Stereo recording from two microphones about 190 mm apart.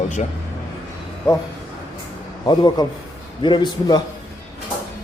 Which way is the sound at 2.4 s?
20° left (ahead or behind).